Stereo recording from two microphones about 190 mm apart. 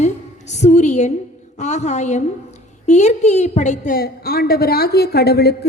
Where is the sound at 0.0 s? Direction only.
35° left (ahead or behind).